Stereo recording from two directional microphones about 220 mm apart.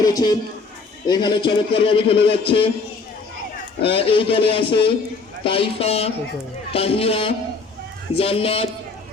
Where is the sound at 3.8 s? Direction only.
25° left (ahead or behind).